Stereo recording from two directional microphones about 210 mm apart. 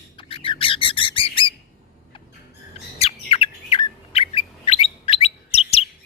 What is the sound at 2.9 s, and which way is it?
Bird, 25° left (ahead or behind).